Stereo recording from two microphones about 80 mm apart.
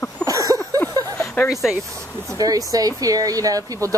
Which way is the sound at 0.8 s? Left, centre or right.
Left.